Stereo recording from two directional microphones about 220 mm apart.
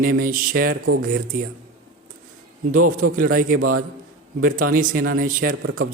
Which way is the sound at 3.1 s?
40° right (ahead or behind).